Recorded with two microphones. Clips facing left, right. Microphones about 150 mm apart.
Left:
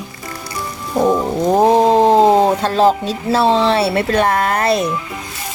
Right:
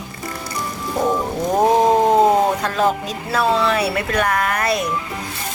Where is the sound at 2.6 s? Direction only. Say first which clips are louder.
Left 5 dB; 30° left (ahead or behind).